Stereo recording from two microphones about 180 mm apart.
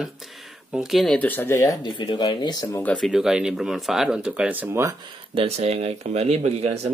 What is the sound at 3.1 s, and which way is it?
Speech, 5° right (ahead or behind).